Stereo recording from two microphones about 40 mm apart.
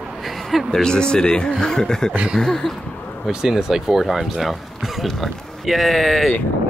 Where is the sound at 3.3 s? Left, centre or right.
Centre.